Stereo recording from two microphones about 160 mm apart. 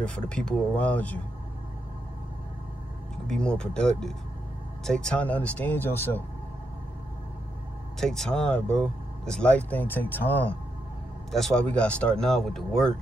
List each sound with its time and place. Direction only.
0.0 s speech: 5° left (ahead or behind)
3.3 s speech: 5° left (ahead or behind)
8.0 s speech: 5° left (ahead or behind)